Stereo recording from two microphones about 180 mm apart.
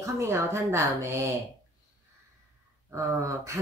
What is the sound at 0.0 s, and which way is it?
Speech, 15° right (ahead or behind).